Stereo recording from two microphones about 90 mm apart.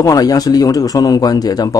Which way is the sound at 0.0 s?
45° left (ahead or behind).